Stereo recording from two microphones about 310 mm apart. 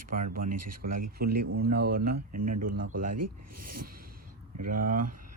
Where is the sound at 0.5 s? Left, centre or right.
Right.